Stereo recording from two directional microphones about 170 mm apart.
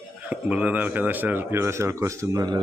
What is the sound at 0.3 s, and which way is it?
Speech, 10° right (ahead or behind).